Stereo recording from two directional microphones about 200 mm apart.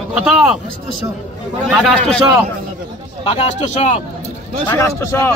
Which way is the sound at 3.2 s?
30° left (ahead or behind).